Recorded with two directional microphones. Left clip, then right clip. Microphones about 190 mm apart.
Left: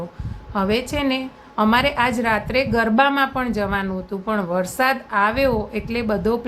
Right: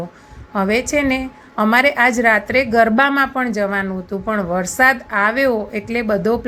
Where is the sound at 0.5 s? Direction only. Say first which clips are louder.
Right 4 dB; 15° right (ahead or behind).